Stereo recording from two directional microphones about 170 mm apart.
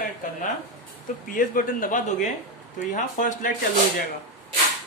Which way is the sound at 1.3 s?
55° left (ahead or behind).